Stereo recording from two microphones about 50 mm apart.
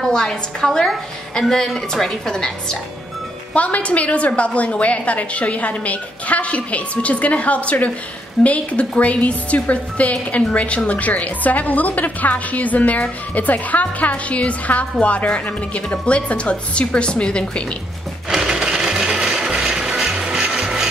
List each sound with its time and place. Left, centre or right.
0.0 s a woman's voice: centre
3.5 s a woman's voice: left
18.3 s a sound: centre